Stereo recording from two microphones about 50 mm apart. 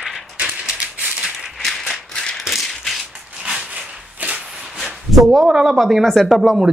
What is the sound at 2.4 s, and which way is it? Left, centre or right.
Rattle, centre.